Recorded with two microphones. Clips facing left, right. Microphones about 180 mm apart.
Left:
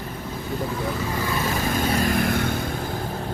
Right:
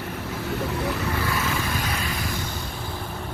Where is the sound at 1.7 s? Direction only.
45° left (ahead or behind).